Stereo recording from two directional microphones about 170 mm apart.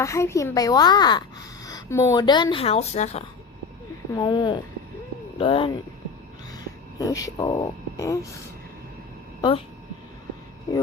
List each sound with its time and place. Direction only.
0.0 s speech: 15° left (ahead or behind); by 3.2 s 40° left (ahead or behind)
4.1 s speech: 25° left (ahead or behind)
7.0 s speech: 20° left (ahead or behind)